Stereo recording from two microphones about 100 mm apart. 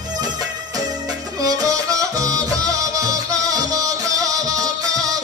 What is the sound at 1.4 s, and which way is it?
Music, 35° right (ahead or behind).